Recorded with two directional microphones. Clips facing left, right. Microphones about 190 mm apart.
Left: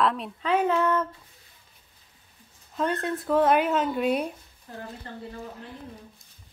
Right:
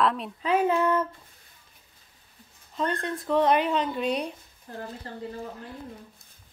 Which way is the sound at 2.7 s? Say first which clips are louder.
Left 2 dB; 5° left (ahead or behind).